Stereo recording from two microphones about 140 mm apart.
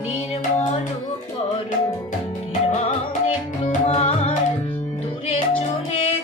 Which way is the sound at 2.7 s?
50° left (ahead or behind).